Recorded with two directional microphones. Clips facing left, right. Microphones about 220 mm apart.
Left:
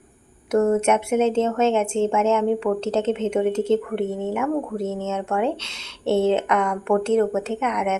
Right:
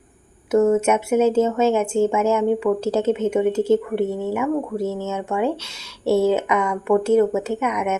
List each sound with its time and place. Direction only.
0.5 s speech: 5° right (ahead or behind)
4.1 s speech: 25° left (ahead or behind)
4.4 s speech: 10° right (ahead or behind)